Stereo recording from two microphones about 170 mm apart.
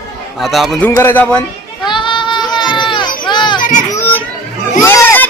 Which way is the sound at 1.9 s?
30° left (ahead or behind).